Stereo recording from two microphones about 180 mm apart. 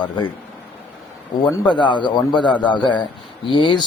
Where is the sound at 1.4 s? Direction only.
20° left (ahead or behind).